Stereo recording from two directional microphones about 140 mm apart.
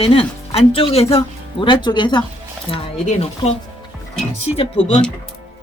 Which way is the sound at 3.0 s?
50° left (ahead or behind).